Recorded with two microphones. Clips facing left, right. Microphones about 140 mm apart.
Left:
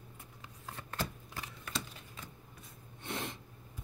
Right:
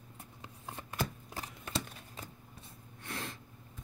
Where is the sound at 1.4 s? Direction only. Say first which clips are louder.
Right 3 dB; 35° right (ahead or behind).